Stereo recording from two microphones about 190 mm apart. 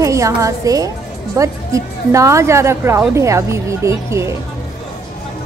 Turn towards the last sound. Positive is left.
turn(degrees=-15)  # may be behind; listen again after turning